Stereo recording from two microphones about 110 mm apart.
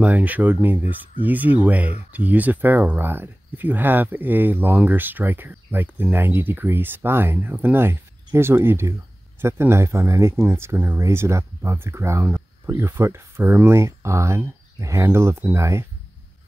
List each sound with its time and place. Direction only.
0.0 s speech: 15° right (ahead or behind)